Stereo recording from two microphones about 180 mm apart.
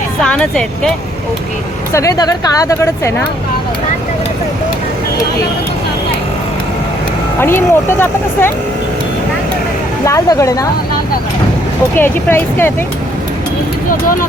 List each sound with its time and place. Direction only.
0.2 s speech: 5° left (ahead or behind)
1.9 s a woman's voice: 15° left (ahead or behind)
7.3 s a woman's voice: 15° left (ahead or behind)
10.1 s a woman's voice: 15° left (ahead or behind)
11.9 s a woman's voice: 10° left (ahead or behind)